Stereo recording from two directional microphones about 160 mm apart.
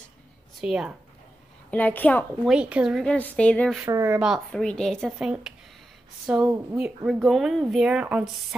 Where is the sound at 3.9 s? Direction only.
20° right (ahead or behind).